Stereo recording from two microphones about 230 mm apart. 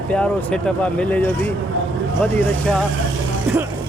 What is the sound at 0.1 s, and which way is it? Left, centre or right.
A man's voice, centre.